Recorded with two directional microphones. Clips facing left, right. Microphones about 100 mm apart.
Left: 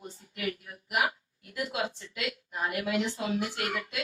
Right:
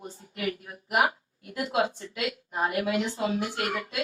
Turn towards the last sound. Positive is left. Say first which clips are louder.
# right 3 dB
turn(degrees=-35)  # may be behind; listen again after turning